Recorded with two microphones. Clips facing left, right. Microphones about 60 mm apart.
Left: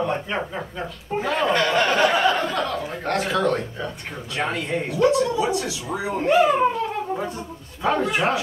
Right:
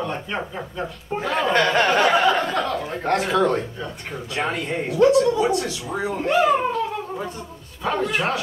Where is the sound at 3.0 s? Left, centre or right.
Centre.